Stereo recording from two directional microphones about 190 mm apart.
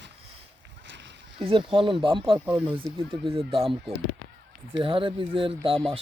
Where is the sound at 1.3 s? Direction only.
25° right (ahead or behind).